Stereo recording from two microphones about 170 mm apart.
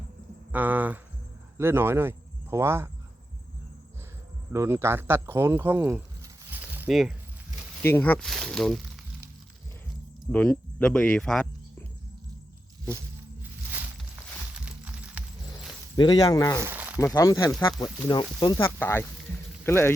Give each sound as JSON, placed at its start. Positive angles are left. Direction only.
{"t": 0.5, "sound": "speech", "side_deg": -10}
{"t": 4.5, "sound": "speech", "side_deg": -15}
{"t": 7.8, "sound": "speech", "side_deg": 10}
{"t": 10.3, "sound": "speech", "side_deg": 10}
{"t": 14.5, "sound": "a sound", "side_deg": -5}
{"t": 16.0, "sound": "speech", "side_deg": 25}
{"t": 16.6, "sound": "a sound", "side_deg": -10}
{"t": 17.2, "sound": "speech", "side_deg": 20}
{"t": 18.6, "sound": "speech", "side_deg": 15}